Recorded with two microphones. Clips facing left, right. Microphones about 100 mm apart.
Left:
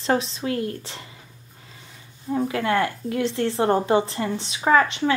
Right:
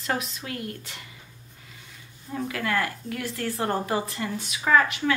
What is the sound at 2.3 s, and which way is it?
A woman's voice, 30° left (ahead or behind).